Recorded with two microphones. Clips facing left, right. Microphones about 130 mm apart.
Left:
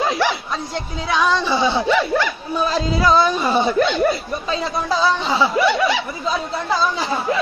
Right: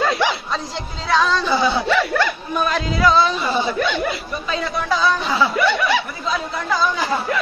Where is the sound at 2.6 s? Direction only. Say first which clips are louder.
Even; 30° left (ahead or behind).